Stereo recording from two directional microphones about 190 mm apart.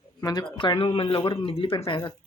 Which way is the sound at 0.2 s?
20° left (ahead or behind).